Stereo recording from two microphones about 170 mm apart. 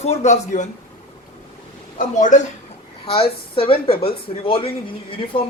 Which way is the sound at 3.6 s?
30° left (ahead or behind).